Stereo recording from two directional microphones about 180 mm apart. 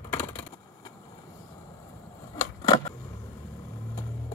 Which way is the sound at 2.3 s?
20° left (ahead or behind).